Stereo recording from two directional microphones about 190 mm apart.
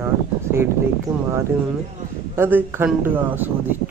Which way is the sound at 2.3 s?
10° right (ahead or behind).